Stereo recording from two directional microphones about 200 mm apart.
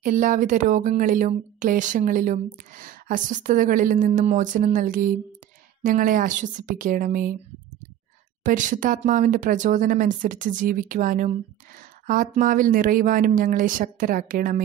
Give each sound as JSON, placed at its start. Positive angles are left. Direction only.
{"t": 0.0, "sound": "speech", "side_deg": -40}
{"t": 8.5, "sound": "speech", "side_deg": -40}